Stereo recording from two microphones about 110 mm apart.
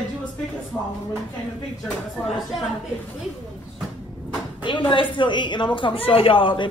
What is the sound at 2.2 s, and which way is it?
Speech, centre (ahead or behind).